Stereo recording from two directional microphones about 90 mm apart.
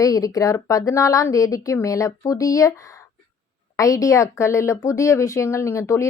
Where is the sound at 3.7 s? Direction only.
40° left (ahead or behind).